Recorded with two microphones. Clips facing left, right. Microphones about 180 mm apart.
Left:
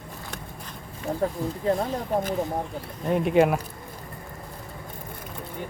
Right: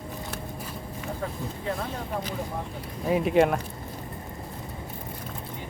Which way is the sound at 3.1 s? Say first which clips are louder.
Left 1 dB; centre (ahead or behind).